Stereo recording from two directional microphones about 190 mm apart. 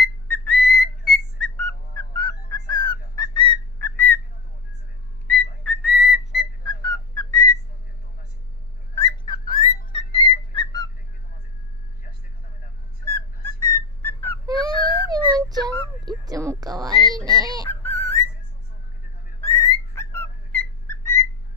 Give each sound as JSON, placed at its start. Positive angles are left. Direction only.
{"t": 0.0, "sound": "whistle", "side_deg": 5}
{"t": 2.1, "sound": "a sound", "side_deg": 20}
{"t": 3.8, "sound": "whistle", "side_deg": 10}
{"t": 5.3, "sound": "whistle", "side_deg": 5}
{"t": 6.8, "sound": "whistling", "side_deg": 20}
{"t": 8.9, "sound": "whistling", "side_deg": 20}
{"t": 9.9, "sound": "music", "side_deg": 30}
{"t": 13.1, "sound": "whistle", "side_deg": 15}
{"t": 14.5, "sound": "baby cry", "side_deg": 25}
{"t": 15.0, "sound": "a sound", "side_deg": -20}
{"t": 17.6, "sound": "a sound", "side_deg": 15}
{"t": 19.5, "sound": "whistling", "side_deg": 15}